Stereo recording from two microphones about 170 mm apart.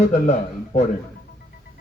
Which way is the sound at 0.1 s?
45° left (ahead or behind).